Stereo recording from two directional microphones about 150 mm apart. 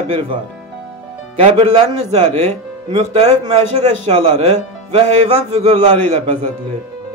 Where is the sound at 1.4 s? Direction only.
45° right (ahead or behind).